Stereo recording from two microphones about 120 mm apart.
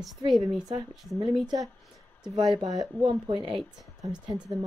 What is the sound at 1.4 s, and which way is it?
Speech, 35° right (ahead or behind).